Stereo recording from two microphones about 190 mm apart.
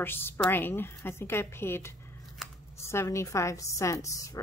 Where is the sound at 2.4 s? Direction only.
Centre (ahead or behind).